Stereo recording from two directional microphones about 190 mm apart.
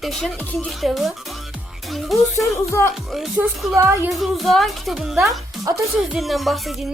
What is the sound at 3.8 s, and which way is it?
Speech, 15° right (ahead or behind).